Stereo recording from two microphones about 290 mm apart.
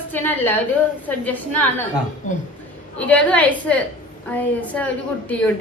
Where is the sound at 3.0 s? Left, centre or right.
Centre.